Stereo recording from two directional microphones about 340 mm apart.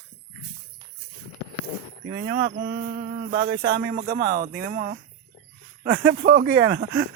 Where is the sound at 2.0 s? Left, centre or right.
Right.